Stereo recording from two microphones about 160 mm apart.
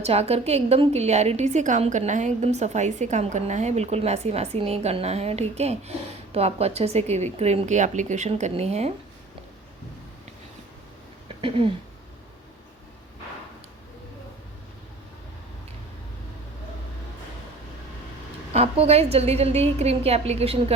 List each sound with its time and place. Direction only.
0.0 s a woman's voice: 40° right (ahead or behind)
11.3 s a sound: 35° right (ahead or behind)
18.5 s a woman's voice: 40° right (ahead or behind)